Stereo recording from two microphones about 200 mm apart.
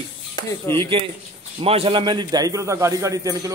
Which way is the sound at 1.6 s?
30° right (ahead or behind).